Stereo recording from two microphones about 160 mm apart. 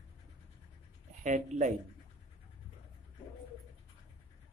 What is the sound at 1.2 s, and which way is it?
Speech, 50° right (ahead or behind).